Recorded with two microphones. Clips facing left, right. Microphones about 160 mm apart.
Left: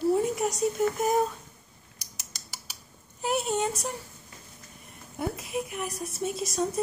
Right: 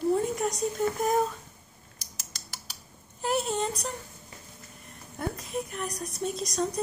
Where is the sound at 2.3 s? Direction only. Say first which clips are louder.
Even; centre (ahead or behind).